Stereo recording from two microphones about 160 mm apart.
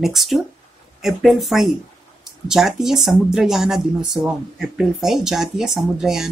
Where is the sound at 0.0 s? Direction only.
Centre (ahead or behind).